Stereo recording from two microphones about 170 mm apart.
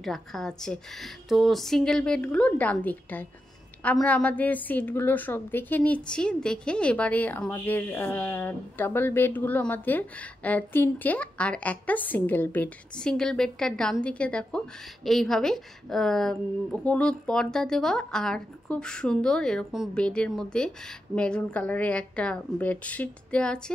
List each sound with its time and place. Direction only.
0.0 s a woman's voice: centre (ahead or behind)